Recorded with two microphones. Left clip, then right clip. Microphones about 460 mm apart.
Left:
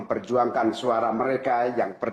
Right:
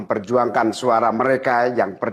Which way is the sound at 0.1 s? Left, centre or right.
Right.